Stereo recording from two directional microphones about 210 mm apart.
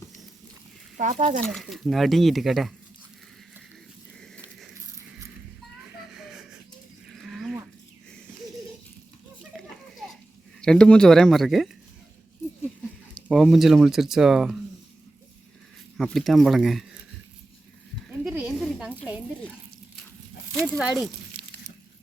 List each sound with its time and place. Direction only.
0.9 s speech: 35° right (ahead or behind)
1.5 s speech: centre (ahead or behind)
7.1 s livestock: centre (ahead or behind)
9.4 s a sound: centre (ahead or behind)
10.6 s speech: 5° left (ahead or behind)
13.2 s speech: centre (ahead or behind)
16.0 s speech: centre (ahead or behind)
18.1 s snake: 5° right (ahead or behind)
20.6 s speech: centre (ahead or behind)